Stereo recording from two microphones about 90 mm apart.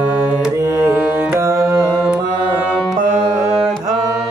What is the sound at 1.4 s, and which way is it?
Mantra, 35° right (ahead or behind).